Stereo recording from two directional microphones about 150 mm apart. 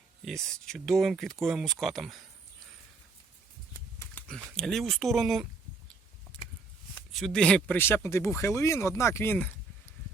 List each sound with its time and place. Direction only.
0.3 s speech: centre (ahead or behind)
4.0 s speech: 10° left (ahead or behind)
6.3 s a sound: 10° left (ahead or behind)
7.1 s speech: centre (ahead or behind)